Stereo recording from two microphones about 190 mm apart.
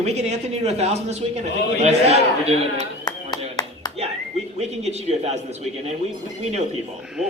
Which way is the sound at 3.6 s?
20° left (ahead or behind).